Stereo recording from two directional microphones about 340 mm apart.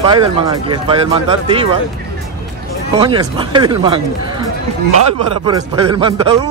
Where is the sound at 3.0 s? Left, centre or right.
Centre.